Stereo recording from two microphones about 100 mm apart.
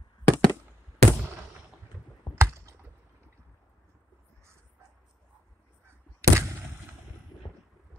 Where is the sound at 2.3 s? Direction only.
30° right (ahead or behind).